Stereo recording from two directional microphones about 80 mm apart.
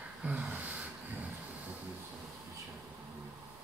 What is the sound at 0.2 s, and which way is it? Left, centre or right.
Gasp, centre.